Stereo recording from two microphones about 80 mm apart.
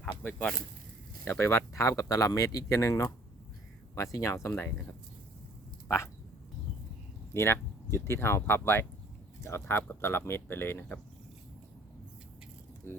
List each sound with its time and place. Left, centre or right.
0.2 s speech: left
1.3 s speech: left
7.3 s speech: left
12.9 s speech: left